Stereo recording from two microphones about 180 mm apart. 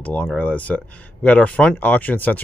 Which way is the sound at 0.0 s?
5° left (ahead or behind).